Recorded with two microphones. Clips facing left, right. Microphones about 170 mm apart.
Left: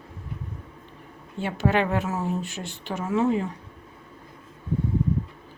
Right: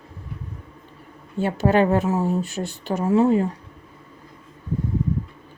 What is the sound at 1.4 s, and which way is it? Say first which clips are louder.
A woman's voice: right 5 dB; 40° right (ahead or behind).